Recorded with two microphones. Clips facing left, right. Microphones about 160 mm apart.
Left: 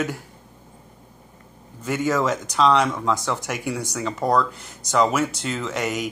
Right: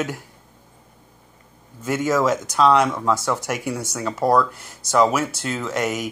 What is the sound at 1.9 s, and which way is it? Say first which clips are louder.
Speech: right 2 dB; 5° right (ahead or behind).